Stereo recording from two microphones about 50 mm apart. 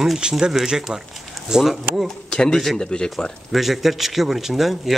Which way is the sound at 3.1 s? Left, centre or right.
Centre.